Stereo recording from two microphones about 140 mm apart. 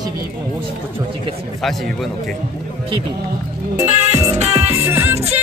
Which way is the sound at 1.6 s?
Centre (ahead or behind).